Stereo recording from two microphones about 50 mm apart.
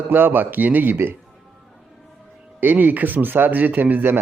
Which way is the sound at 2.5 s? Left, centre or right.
Right.